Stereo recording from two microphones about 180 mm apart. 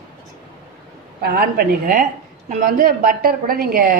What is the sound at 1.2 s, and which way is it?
A woman's voice, 55° right (ahead or behind).